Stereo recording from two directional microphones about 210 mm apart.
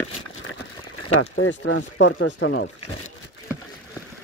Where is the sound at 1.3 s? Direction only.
60° left (ahead or behind).